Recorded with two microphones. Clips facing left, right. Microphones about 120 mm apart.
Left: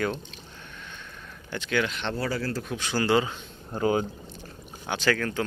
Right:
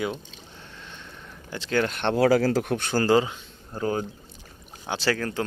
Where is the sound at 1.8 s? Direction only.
50° right (ahead or behind).